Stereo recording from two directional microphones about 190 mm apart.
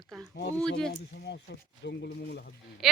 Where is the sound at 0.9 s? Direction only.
60° left (ahead or behind).